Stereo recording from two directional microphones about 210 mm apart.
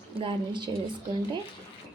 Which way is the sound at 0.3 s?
20° right (ahead or behind).